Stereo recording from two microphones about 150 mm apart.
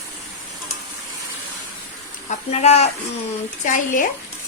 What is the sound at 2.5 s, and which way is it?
Speech, 45° left (ahead or behind).